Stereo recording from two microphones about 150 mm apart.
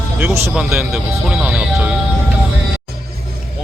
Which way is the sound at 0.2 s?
15° right (ahead or behind).